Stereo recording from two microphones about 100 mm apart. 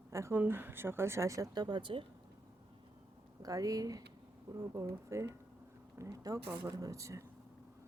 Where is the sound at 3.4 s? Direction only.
35° right (ahead or behind).